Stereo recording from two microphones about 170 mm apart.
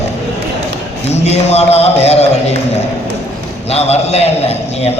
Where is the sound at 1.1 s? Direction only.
40° left (ahead or behind).